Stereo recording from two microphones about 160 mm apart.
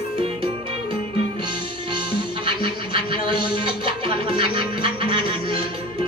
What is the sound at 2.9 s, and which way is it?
Music, 30° right (ahead or behind).